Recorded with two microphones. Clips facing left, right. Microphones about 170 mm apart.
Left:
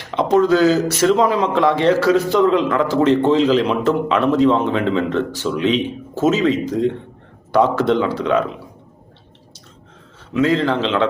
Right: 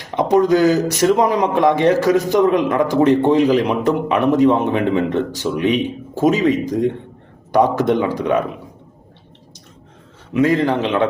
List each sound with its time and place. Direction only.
0.1 s speech: 15° right (ahead or behind)
10.3 s speech: 15° right (ahead or behind)